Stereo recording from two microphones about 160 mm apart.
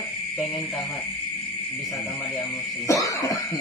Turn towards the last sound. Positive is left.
turn(degrees=20)  # may be behind; listen again after turning